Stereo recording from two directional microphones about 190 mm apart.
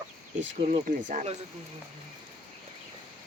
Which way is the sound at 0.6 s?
40° right (ahead or behind).